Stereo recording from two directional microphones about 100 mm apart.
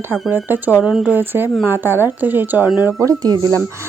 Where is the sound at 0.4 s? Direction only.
20° right (ahead or behind).